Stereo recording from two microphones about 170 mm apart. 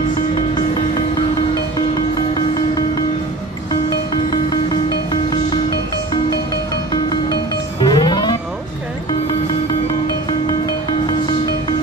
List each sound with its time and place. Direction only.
4.1 s music: 25° left (ahead or behind)
6.9 s music: 25° left (ahead or behind)
11.1 s music: 25° left (ahead or behind)